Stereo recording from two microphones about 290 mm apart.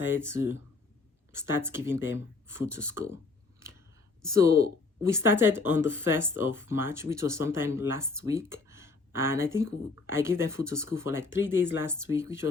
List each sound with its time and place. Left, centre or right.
0.0 s speech: centre
4.9 s speech: centre
5.7 s speech: left
6.0 s speech: centre